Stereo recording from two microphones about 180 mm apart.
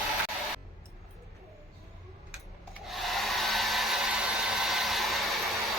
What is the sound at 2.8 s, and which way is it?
Hair dryer, centre (ahead or behind).